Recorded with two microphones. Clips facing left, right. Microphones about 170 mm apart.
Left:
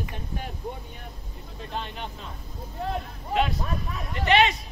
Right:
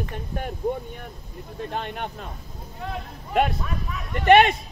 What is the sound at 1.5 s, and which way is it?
Speech, 55° right (ahead or behind).